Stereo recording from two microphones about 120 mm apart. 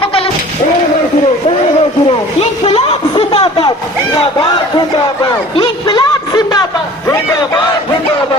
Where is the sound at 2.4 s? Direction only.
55° left (ahead or behind).